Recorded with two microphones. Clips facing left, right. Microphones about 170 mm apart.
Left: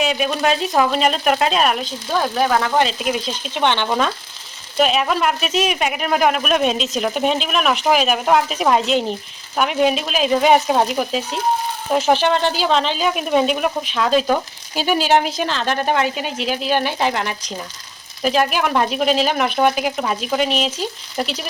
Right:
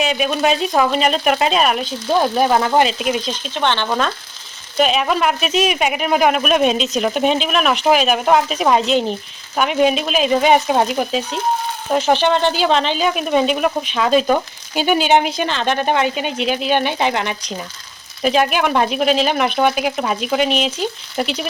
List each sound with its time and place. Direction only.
0.0 s speech: centre (ahead or behind)
2.1 s speech: 15° right (ahead or behind)
2.8 s speech: centre (ahead or behind)
3.5 s speech: 15° left (ahead or behind)